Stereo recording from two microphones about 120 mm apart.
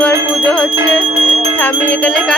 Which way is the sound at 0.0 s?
10° left (ahead or behind).